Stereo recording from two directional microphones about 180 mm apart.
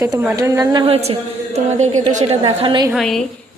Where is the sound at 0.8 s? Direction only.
35° right (ahead or behind).